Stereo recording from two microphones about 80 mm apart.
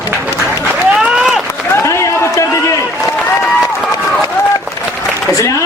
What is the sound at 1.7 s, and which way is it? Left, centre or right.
Run, left.